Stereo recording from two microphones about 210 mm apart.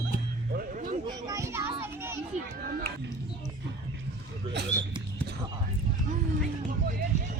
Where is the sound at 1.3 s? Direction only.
15° right (ahead or behind).